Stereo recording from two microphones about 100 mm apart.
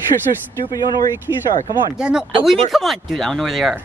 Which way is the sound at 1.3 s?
50° left (ahead or behind).